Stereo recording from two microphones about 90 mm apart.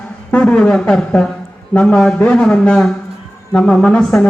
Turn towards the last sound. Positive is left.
turn(degrees=10)  # may be behind; listen again after turning